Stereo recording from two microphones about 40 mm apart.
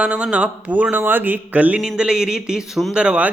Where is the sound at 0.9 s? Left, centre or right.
Right.